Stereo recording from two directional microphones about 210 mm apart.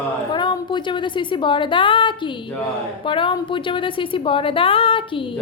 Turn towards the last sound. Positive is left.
turn(degrees=25)  # may be behind; listen again after turning